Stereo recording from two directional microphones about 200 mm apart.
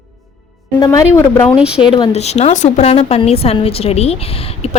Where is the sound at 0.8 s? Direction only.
15° left (ahead or behind).